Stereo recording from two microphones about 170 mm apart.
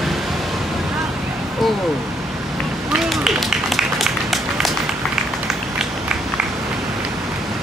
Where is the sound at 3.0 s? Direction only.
Centre (ahead or behind).